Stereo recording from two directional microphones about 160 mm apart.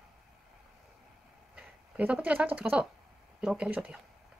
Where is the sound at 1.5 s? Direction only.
10° right (ahead or behind).